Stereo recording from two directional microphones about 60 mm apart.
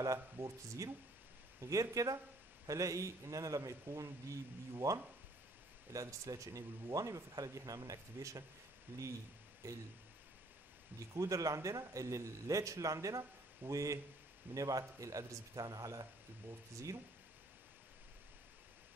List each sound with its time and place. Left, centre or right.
0.0 s speech: right
3.9 s speech: right
8.9 s speech: right
9.6 s speech: right
11.1 s speech: right
14.5 s speech: right